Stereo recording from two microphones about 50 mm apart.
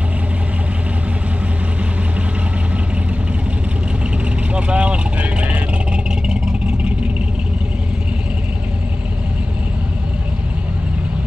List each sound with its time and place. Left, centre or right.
4.6 s vehicle: right